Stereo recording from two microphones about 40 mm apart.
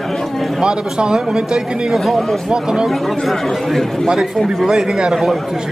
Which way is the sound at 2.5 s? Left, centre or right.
Right.